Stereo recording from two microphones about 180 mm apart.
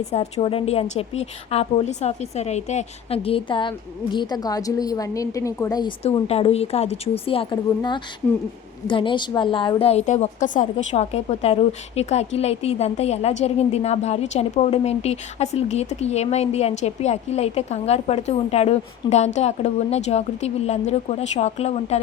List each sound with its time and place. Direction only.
0.1 s a woman's voice: 35° left (ahead or behind); by 5.9 s 20° left (ahead or behind)
6.0 s a woman's voice: 35° left (ahead or behind)